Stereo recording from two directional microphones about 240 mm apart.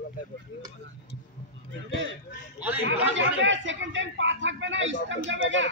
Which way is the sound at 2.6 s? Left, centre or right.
Centre.